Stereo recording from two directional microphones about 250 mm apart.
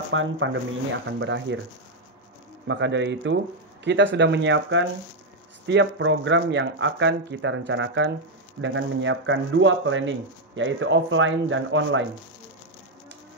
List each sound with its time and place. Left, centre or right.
0.1 s speech: right
2.7 s speech: right